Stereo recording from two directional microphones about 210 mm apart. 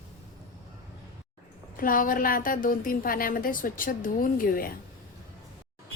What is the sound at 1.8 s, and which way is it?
A woman's voice, 40° left (ahead or behind).